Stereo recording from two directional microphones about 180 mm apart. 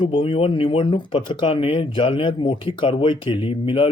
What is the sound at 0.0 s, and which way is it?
Speech, 30° left (ahead or behind).